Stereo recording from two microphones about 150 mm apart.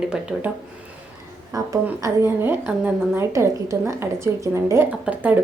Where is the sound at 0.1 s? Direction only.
5° right (ahead or behind).